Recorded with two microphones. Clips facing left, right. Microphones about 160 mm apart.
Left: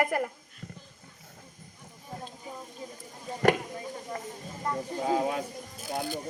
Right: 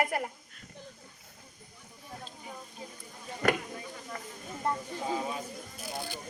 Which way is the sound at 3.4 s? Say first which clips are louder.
Left 5 dB; 40° left (ahead or behind).